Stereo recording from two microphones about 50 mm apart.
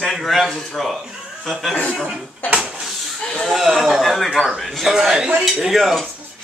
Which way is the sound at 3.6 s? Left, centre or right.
Centre.